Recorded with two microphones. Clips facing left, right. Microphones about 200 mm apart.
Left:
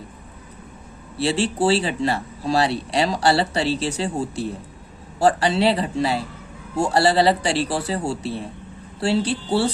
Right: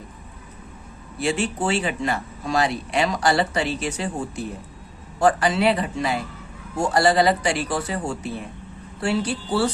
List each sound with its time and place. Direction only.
1.2 s speech: 35° left (ahead or behind)